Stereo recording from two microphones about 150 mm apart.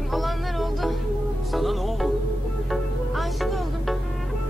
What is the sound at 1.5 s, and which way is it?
Music, centre (ahead or behind).